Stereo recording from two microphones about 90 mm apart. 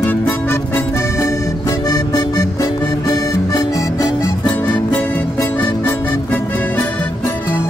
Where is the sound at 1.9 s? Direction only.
45° left (ahead or behind).